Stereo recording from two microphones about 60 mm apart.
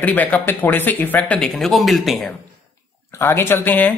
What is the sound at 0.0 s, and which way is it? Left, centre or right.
Speech, left.